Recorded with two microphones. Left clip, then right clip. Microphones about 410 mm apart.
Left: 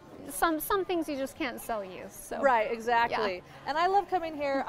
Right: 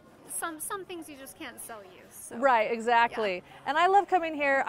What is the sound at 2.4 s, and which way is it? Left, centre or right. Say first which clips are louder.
A woman's voice: right 2 dB; right.